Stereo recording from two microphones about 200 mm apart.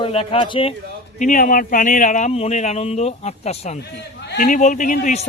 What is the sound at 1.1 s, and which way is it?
Speech, 40° left (ahead or behind).